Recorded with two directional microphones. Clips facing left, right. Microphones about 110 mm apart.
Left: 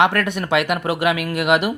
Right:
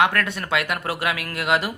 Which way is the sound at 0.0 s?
25° left (ahead or behind).